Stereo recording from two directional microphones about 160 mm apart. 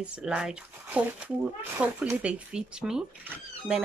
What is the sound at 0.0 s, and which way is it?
Speech, 5° right (ahead or behind).